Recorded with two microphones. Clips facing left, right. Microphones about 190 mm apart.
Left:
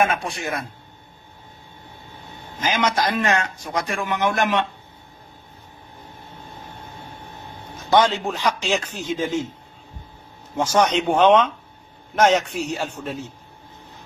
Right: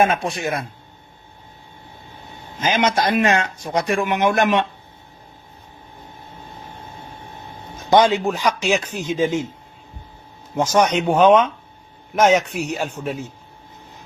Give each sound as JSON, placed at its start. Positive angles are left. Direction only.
{"t": 0.0, "sound": "speech", "side_deg": -25}
{"t": 2.6, "sound": "speech", "side_deg": -20}
{"t": 7.9, "sound": "speech", "side_deg": -15}
{"t": 10.7, "sound": "speech", "side_deg": -10}